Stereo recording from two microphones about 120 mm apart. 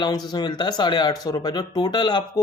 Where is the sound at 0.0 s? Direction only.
35° left (ahead or behind).